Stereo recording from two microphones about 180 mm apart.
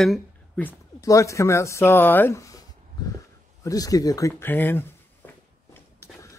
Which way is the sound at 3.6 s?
20° left (ahead or behind).